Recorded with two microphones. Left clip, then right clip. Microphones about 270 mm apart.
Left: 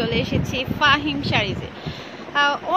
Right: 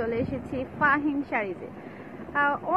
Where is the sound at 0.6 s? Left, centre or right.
Left.